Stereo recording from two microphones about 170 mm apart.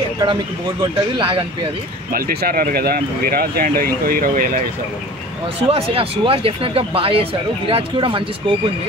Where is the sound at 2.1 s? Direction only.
60° right (ahead or behind).